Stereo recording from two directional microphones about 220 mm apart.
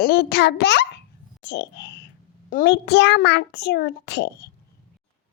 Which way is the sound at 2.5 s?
50° left (ahead or behind).